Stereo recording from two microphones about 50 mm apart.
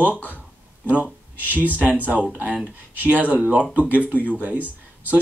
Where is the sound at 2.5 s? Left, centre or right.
Right.